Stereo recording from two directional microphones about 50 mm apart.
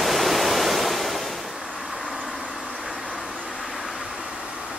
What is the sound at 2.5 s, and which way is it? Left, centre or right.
Vehicle, centre.